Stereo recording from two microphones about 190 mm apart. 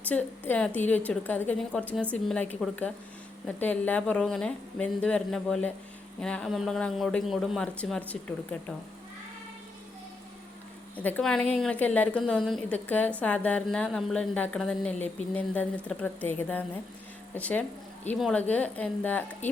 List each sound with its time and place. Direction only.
0.1 s a woman's voice: 10° left (ahead or behind)
10.9 s a man's voice: 5° left (ahead or behind)